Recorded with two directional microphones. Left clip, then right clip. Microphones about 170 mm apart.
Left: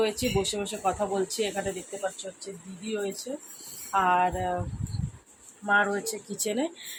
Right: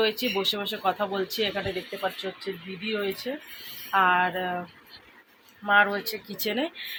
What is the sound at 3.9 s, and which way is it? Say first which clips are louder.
Speech: right 2 dB; 5° right (ahead or behind).